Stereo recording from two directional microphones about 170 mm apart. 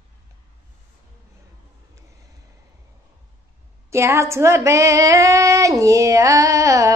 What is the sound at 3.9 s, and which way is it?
Female singing, 15° right (ahead or behind).